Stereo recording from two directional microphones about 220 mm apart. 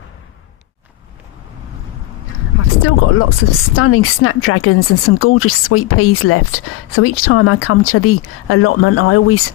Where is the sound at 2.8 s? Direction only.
70° left (ahead or behind).